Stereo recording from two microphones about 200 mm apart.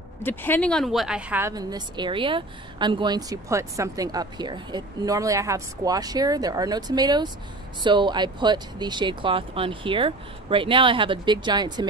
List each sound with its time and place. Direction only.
0.2 s speech: 10° left (ahead or behind); by 1.5 s 5° right (ahead or behind)
1.5 s a woman's voice: 20° right (ahead or behind)